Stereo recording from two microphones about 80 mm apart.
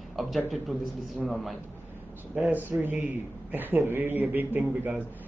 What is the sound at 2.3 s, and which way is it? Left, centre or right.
A man's voice, right.